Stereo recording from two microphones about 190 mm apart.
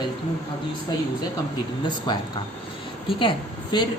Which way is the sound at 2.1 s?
20° left (ahead or behind).